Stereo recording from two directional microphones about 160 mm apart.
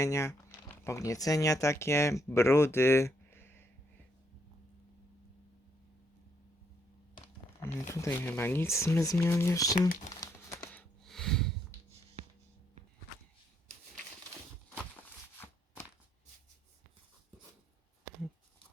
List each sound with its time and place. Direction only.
0.0 s speech: 20° left (ahead or behind)
7.6 s speech: 20° left (ahead or behind)
10.1 s crumpling: 25° left (ahead or behind)
10.7 s a sound: 5° left (ahead or behind)